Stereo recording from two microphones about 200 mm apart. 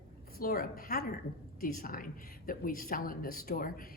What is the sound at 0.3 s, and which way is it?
A woman's voice, 45° left (ahead or behind).